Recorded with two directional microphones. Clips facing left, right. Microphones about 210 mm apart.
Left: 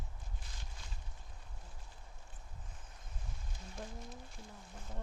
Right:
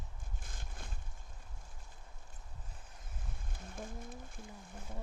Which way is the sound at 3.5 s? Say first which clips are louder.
Right 2 dB; 50° right (ahead or behind).